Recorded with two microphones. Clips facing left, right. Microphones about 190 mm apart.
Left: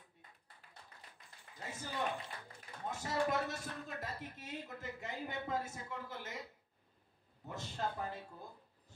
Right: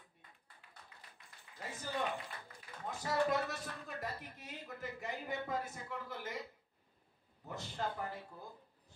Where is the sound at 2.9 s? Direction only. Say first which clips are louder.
Right 2 dB; 25° left (ahead or behind).